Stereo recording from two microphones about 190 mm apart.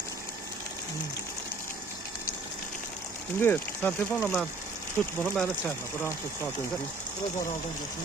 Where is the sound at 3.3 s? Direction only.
10° left (ahead or behind).